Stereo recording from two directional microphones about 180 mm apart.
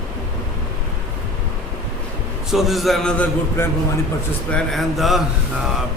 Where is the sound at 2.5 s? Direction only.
Centre (ahead or behind).